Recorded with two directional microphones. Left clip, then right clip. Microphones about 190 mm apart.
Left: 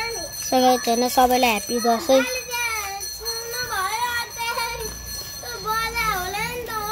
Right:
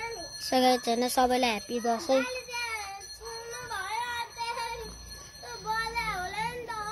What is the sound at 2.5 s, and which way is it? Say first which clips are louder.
Music: left 10 dB; 45° right (ahead or behind).